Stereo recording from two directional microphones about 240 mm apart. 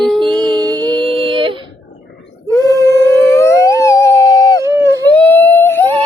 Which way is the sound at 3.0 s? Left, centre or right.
Centre.